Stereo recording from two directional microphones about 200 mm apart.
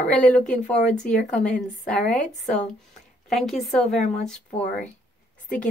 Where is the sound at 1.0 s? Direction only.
5° left (ahead or behind).